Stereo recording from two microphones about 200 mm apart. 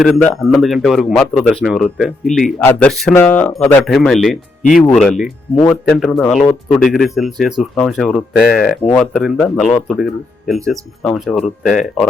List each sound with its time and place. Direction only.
0.0 s a man's voice: 5° left (ahead or behind)